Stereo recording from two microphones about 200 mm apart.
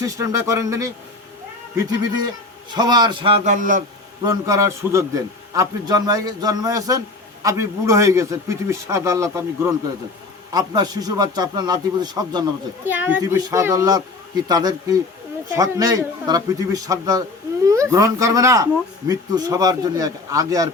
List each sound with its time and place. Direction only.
0.0 s a man's voice: 15° right (ahead or behind); by 3.8 s 40° right (ahead or behind)
4.2 s a man's voice: 15° right (ahead or behind)